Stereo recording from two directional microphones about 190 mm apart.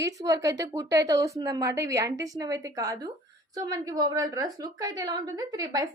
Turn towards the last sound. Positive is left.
turn(degrees=-20)  # may be behind; listen again after turning